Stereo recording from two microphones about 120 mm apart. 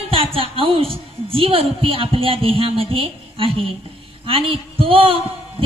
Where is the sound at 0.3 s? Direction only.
50° right (ahead or behind).